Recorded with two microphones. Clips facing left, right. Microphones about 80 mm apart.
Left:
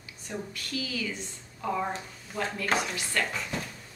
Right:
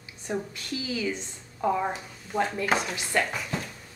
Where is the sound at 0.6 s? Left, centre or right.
Right.